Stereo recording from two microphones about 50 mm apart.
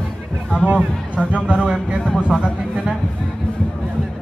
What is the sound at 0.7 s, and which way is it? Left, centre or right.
Speech, right.